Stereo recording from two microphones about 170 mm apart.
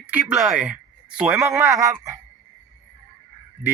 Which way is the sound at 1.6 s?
15° right (ahead or behind).